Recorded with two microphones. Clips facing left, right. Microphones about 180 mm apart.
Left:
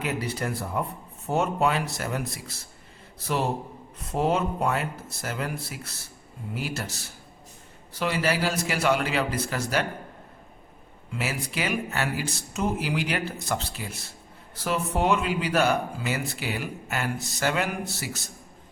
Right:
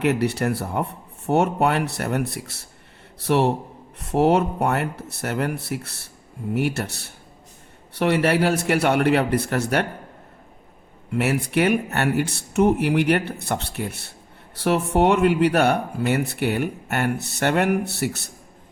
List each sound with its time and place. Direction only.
0.0 s speech: 70° right (ahead or behind)
11.1 s speech: 65° right (ahead or behind)